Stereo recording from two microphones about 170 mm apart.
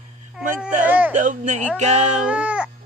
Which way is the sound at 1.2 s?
45° right (ahead or behind).